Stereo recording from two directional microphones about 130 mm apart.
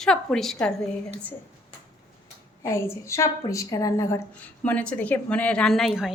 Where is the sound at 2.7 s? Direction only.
20° left (ahead or behind).